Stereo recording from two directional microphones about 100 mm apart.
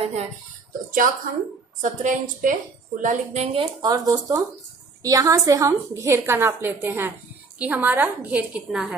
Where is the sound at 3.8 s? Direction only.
40° right (ahead or behind); by 8.8 s 15° right (ahead or behind).